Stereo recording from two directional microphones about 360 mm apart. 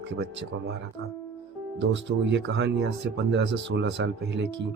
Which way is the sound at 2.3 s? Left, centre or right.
Right.